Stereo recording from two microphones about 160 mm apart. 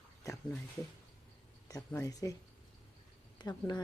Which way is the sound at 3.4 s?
25° left (ahead or behind).